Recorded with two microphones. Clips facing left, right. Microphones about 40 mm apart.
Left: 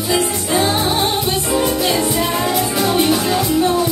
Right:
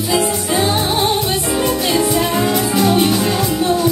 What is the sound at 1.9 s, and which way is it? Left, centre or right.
Music, centre.